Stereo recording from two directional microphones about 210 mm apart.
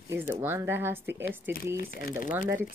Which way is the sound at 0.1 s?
10° right (ahead or behind).